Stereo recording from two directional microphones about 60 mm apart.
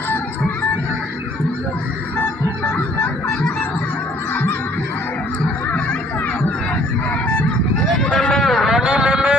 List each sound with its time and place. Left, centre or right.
2.6 s music: left
7.9 s a sound: centre
8.8 s vehicle: centre